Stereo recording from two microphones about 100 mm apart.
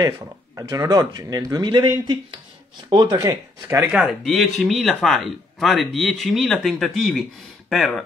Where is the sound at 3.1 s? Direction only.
30° right (ahead or behind).